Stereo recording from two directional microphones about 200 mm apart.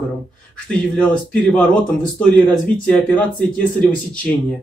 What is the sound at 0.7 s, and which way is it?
Speech, 5° left (ahead or behind).